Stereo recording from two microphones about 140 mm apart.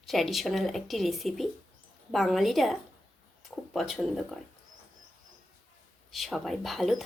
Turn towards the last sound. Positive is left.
turn(degrees=0)  # may be behind; listen again after turning